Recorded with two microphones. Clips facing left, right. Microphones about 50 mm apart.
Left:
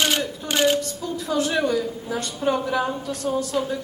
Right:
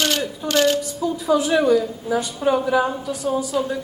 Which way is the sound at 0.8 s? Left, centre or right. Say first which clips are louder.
Right 4 dB; centre.